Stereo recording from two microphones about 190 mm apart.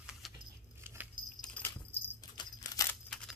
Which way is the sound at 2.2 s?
20° left (ahead or behind).